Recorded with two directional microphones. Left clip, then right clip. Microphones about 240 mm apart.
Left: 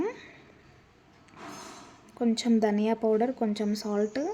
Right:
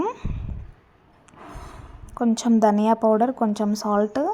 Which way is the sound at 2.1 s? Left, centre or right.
Centre.